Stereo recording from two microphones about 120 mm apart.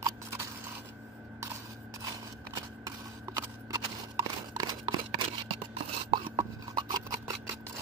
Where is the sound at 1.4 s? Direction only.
25° right (ahead or behind).